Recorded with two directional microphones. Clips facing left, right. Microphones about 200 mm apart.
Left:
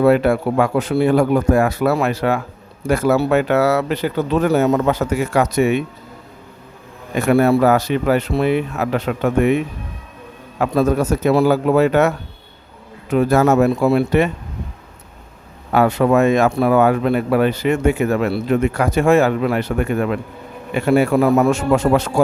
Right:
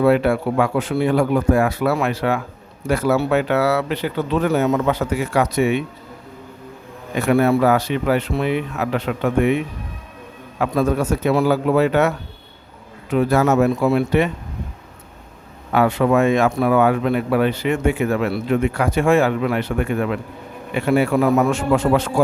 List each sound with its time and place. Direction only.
0.0 s speech: 45° left (ahead or behind)
7.2 s speech: 45° left (ahead or behind)
10.6 s speech: 40° left (ahead or behind)
15.7 s speech: 40° left (ahead or behind)